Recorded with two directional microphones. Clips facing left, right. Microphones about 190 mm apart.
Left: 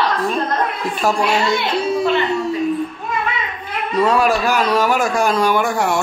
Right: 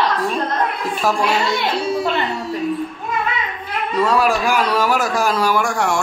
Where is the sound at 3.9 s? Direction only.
Centre (ahead or behind).